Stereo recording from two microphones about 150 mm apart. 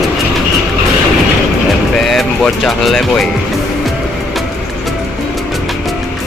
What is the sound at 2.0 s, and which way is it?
Music, centre (ahead or behind).